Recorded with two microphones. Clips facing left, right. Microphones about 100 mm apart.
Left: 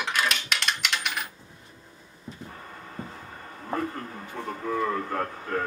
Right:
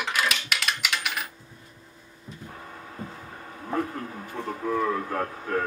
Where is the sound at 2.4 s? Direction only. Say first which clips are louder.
Right 1 dB; 5° right (ahead or behind).